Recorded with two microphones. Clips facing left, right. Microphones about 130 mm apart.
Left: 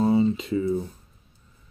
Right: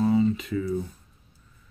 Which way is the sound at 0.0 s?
25° left (ahead or behind).